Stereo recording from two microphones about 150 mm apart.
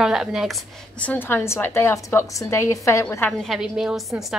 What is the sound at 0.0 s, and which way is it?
Speech, 5° right (ahead or behind).